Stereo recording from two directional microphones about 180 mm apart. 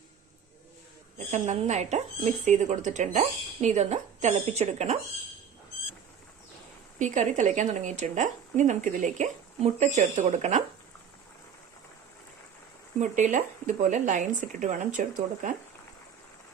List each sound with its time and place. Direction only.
1.3 s speech: 40° right (ahead or behind)
7.0 s speech: 45° right (ahead or behind)
13.0 s speech: 45° right (ahead or behind)